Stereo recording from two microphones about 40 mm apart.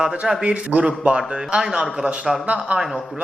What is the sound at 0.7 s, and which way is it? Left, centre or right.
Speech, right.